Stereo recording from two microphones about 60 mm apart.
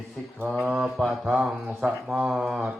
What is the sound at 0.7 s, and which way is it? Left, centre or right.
Mantra, centre.